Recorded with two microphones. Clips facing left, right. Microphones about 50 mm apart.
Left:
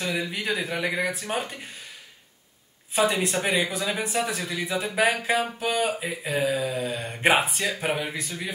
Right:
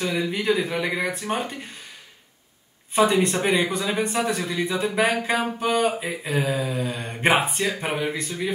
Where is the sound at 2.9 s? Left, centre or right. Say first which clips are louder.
Right 4 dB; centre.